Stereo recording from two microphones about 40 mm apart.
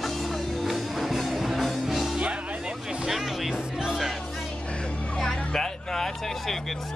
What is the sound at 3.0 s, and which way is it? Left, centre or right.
Music, centre.